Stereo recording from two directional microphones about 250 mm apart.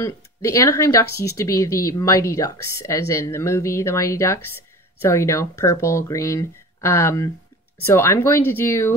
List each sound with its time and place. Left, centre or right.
0.0 s speech: centre